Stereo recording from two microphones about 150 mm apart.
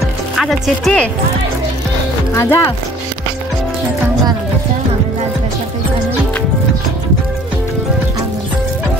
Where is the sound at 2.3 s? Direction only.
15° left (ahead or behind).